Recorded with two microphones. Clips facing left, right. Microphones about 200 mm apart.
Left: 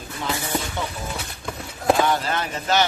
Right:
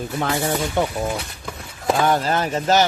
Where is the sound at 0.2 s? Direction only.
55° right (ahead or behind).